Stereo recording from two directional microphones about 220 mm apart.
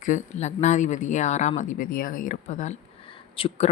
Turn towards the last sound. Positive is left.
turn(degrees=25)  # may be behind; listen again after turning